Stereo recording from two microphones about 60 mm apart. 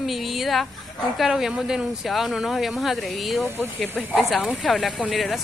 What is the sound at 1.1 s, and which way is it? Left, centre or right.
A woman's voice, centre.